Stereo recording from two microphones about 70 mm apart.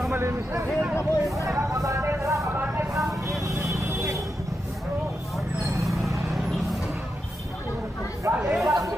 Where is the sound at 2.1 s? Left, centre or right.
Right.